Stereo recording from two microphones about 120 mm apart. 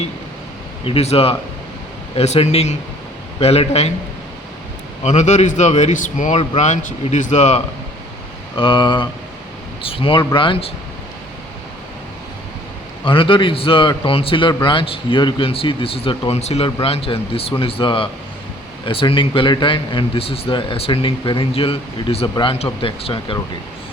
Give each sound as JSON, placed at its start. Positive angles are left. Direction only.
{"t": 0.9, "sound": "speech", "side_deg": 55}
{"t": 5.0, "sound": "a man's voice", "side_deg": 80}
{"t": 8.5, "sound": "a man's voice", "side_deg": 45}
{"t": 13.1, "sound": "a man's voice", "side_deg": 45}